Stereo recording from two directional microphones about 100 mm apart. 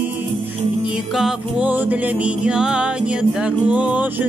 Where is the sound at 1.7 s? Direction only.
15° right (ahead or behind).